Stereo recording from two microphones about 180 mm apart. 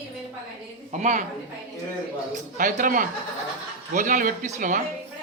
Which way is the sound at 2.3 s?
45° right (ahead or behind).